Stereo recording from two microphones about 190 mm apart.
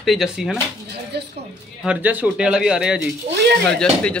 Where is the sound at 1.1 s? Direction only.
60° right (ahead or behind).